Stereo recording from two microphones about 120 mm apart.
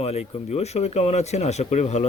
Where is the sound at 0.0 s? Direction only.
60° left (ahead or behind).